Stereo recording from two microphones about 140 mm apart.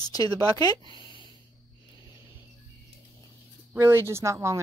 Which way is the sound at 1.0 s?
35° left (ahead or behind).